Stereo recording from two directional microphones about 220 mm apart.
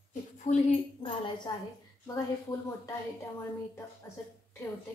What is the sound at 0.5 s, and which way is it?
A woman's voice, 30° left (ahead or behind).